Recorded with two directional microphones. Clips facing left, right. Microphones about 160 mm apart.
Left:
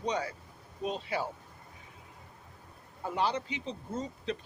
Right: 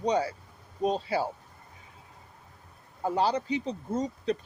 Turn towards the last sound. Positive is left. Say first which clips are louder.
# right 6 dB
turn(degrees=-40)  # may be behind; listen again after turning